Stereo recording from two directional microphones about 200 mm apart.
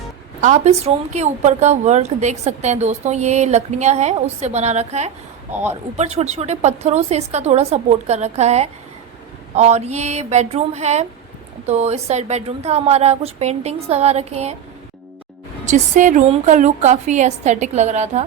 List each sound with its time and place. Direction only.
0.4 s a woman's voice: 35° right (ahead or behind)
15.6 s a woman's voice: 40° right (ahead or behind)